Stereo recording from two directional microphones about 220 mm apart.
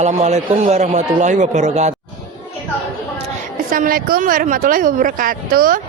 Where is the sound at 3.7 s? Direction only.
40° right (ahead or behind).